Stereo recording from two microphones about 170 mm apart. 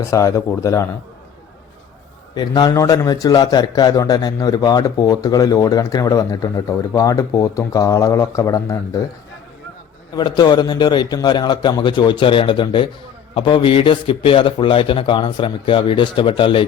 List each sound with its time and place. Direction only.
0.0 s a man's voice: 20° left (ahead or behind)
2.3 s a man's voice: 25° left (ahead or behind)
10.2 s a man's voice: 25° left (ahead or behind)